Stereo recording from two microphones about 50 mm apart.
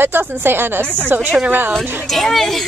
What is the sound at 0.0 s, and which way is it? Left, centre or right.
Speech, right.